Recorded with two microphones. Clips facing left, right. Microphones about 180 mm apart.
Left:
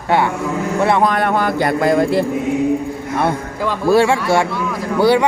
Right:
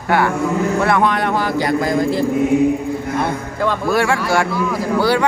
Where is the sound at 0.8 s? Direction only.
25° left (ahead or behind).